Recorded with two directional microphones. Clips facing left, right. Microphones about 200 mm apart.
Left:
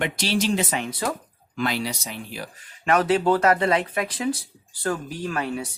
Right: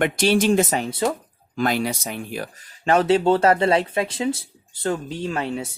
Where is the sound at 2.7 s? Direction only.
30° right (ahead or behind).